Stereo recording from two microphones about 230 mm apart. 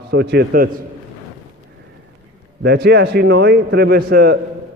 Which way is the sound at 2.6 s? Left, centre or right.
Right.